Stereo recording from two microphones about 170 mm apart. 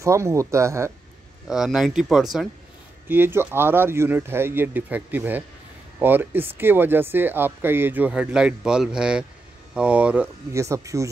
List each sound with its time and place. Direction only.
0.0 s speech: 15° right (ahead or behind)
1.5 s speech: 5° right (ahead or behind)
3.1 s speech: 15° right (ahead or behind)